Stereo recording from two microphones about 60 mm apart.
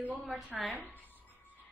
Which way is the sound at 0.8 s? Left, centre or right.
Left.